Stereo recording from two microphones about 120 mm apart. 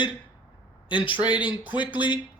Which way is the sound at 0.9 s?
45° left (ahead or behind).